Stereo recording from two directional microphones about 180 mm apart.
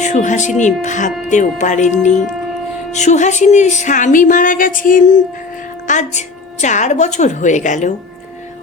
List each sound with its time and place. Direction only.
0.0 s a woman's voice: 40° left (ahead or behind)